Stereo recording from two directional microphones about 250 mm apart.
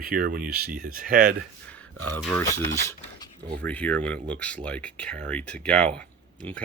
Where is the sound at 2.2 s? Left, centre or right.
Centre.